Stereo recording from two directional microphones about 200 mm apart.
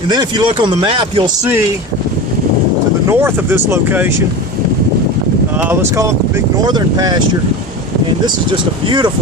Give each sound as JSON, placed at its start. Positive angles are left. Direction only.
{"t": 0.1, "sound": "speech", "side_deg": -20}
{"t": 3.1, "sound": "speech", "side_deg": -10}
{"t": 5.5, "sound": "speech", "side_deg": -10}
{"t": 6.7, "sound": "speech", "side_deg": -20}
{"t": 8.9, "sound": "speech", "side_deg": -20}